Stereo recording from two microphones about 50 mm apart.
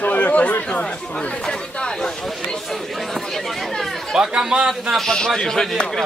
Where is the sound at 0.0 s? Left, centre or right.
Left.